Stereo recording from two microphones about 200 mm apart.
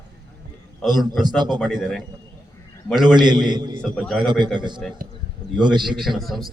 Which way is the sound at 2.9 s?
20° right (ahead or behind).